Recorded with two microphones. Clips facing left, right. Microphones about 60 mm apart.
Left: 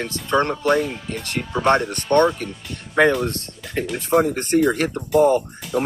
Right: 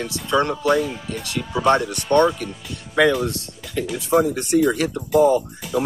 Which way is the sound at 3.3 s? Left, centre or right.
Left.